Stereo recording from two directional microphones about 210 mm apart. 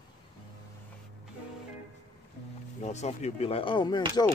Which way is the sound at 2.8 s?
35° left (ahead or behind).